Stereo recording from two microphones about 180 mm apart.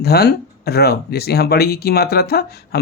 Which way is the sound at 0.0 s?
60° left (ahead or behind).